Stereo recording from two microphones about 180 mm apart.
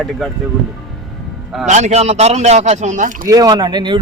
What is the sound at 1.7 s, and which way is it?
Speech, 40° right (ahead or behind).